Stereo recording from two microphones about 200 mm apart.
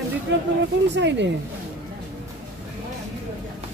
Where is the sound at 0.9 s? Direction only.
60° right (ahead or behind).